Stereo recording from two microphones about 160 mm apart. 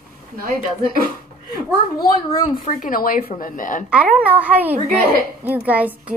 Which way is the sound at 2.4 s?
50° left (ahead or behind).